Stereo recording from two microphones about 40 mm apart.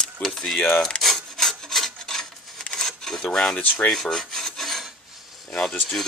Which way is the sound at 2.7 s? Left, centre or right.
Centre.